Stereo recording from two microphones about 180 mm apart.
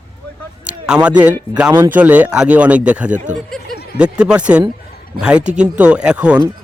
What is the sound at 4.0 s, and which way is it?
Speech, 5° right (ahead or behind).